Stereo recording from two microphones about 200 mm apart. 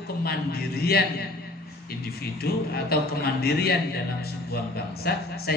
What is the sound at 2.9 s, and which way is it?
A man's voice, 50° left (ahead or behind).